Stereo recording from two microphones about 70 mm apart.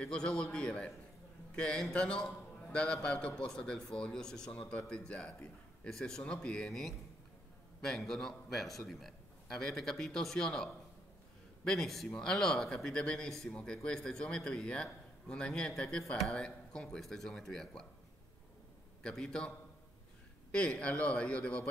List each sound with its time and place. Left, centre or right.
0.0 s a man's voice: centre
19.0 s a man's voice: centre
20.5 s a man's voice: centre